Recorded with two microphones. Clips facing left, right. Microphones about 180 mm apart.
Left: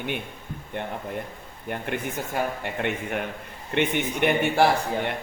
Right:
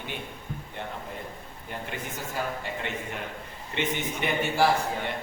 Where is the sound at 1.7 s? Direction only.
60° left (ahead or behind).